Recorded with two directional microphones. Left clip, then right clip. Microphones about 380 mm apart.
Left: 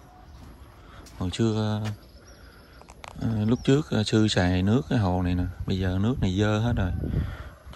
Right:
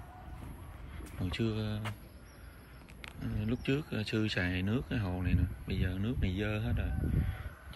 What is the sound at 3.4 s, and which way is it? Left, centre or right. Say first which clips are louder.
Speech: left 11 dB; centre.